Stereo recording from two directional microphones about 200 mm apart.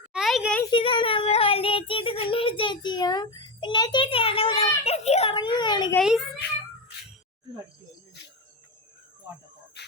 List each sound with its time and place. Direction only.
0.1 s a sound: centre (ahead or behind)
0.6 s child singing: 25° left (ahead or behind)
4.8 s a child's voice: 30° left (ahead or behind)
6.0 s a child's voice: centre (ahead or behind)
9.8 s insect: 60° left (ahead or behind)